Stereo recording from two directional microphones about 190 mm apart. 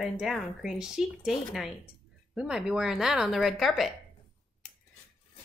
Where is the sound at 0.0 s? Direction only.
Centre (ahead or behind).